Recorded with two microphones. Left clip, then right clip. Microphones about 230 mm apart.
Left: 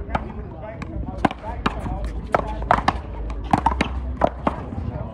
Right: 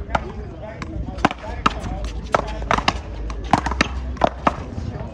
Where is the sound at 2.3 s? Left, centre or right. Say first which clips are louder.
Even; centre.